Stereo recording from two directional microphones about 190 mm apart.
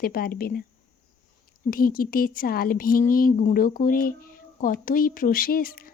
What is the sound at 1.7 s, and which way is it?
A woman's voice, 50° left (ahead or behind).